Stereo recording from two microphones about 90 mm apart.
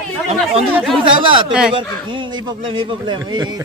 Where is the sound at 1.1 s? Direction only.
65° right (ahead or behind).